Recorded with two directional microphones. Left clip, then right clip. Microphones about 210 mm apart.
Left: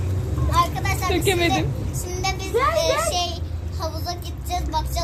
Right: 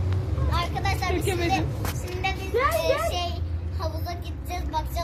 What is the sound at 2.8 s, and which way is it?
Child singing, 10° right (ahead or behind).